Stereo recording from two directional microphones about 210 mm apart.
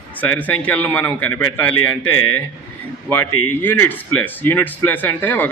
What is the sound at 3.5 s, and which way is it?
A man's voice, 10° left (ahead or behind).